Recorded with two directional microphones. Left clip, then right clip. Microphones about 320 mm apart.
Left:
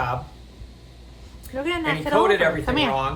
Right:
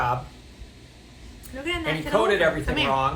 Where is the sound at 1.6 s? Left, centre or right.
Centre.